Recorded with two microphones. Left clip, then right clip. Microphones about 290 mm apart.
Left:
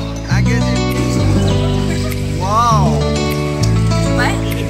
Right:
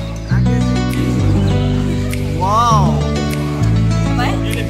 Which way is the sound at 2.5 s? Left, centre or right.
Centre.